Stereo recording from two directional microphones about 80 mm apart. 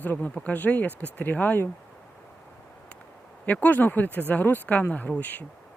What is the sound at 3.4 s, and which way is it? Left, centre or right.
Speech, centre.